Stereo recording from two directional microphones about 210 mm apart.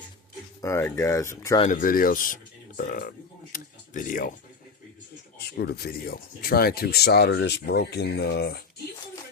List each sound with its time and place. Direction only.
0.6 s speech: 15° left (ahead or behind)
1.6 s speech: 40° left (ahead or behind)
5.5 s speech: 50° left (ahead or behind)